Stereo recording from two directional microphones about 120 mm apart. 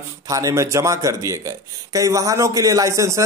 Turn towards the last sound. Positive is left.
turn(degrees=-25)  # may be behind; listen again after turning